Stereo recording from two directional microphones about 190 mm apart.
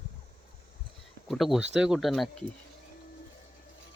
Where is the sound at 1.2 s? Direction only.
Centre (ahead or behind).